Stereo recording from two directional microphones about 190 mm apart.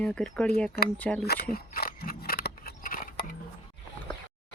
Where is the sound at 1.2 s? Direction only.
55° left (ahead or behind).